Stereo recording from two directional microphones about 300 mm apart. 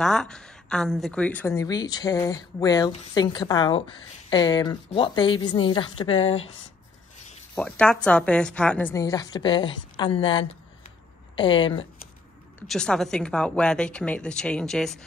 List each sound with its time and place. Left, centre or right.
0.0 s a woman's voice: centre
7.5 s a woman's voice: centre
12.5 s a woman's voice: centre